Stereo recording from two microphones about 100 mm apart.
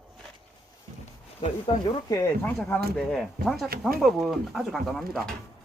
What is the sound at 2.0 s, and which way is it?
Speech, 35° left (ahead or behind).